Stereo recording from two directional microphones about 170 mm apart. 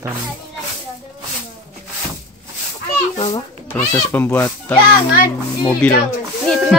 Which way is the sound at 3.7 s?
10° left (ahead or behind).